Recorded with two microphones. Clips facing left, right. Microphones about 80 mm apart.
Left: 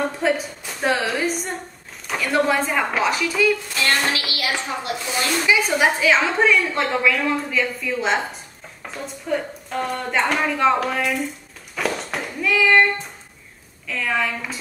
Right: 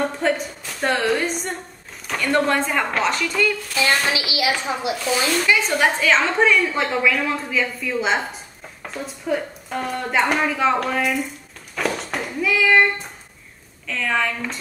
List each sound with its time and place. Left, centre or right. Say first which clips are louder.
0.2 s a woman's voice: even; centre
3.7 s a woman's voice: right 1 dB; centre
5.4 s a woman's voice: left 3 dB; centre
11.7 s a sound: even; centre
13.8 s a woman's voice: right 1 dB; centre